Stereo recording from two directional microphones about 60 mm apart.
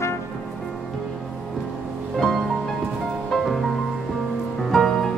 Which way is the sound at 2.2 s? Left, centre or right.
Centre.